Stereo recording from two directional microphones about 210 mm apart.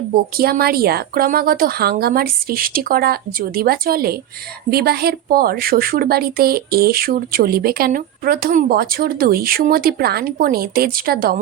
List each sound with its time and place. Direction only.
0.1 s a woman's voice: 45° right (ahead or behind)